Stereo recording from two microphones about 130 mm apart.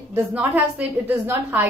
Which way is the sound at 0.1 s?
15° right (ahead or behind).